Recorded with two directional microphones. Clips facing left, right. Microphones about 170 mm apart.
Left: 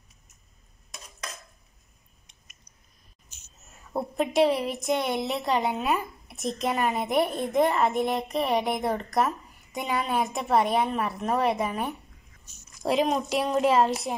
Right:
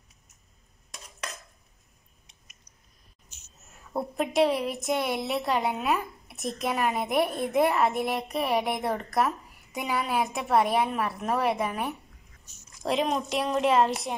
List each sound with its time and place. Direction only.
3.9 s a woman's voice: centre (ahead or behind)